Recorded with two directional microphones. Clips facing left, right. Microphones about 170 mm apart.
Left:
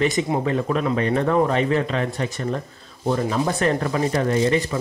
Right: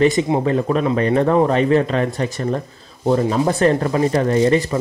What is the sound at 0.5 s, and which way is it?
Speech, 35° right (ahead or behind).